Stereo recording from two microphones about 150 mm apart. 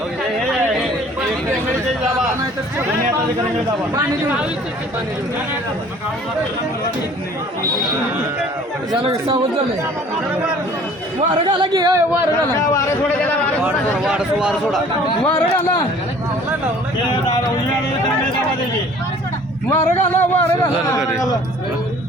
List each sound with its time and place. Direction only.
3.9 s speech: 10° right (ahead or behind)
8.9 s speech: 35° right (ahead or behind)
11.4 s a man's voice: 25° right (ahead or behind)
14.0 s a man's voice: 5° right (ahead or behind)
19.7 s speech: 15° left (ahead or behind)